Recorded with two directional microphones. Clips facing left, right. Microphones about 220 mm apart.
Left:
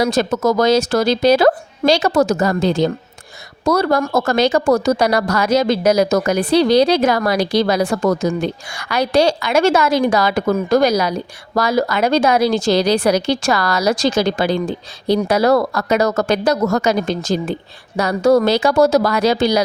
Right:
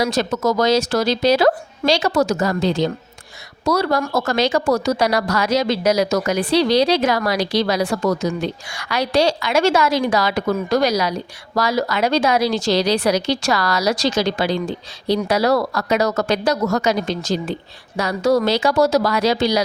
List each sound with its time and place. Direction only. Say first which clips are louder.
0.0 s a woman's voice: left 3 dB; 50° left (ahead or behind)